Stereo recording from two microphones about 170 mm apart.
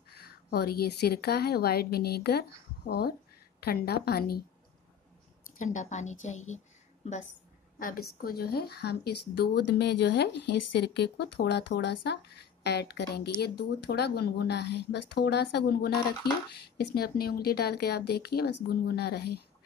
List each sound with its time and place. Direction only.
0.2 s a woman's voice: 65° left (ahead or behind)
5.6 s a woman's voice: 45° left (ahead or behind)
7.8 s speech: 60° left (ahead or behind)
16.1 s speech: 25° left (ahead or behind)
16.5 s speech: 70° left (ahead or behind)